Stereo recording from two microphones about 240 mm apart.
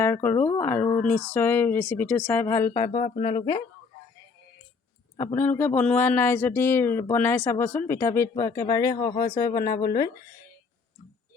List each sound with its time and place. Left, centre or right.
0.0 s speech: centre
2.9 s speech: left
3.3 s speech: centre
5.1 s speech: centre
9.0 s speech: left